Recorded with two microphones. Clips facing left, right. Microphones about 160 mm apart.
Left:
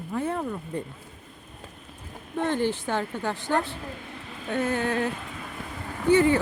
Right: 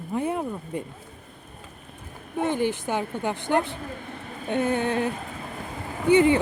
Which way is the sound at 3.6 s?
55° right (ahead or behind).